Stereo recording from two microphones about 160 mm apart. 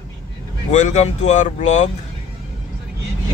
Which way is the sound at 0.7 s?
45° left (ahead or behind).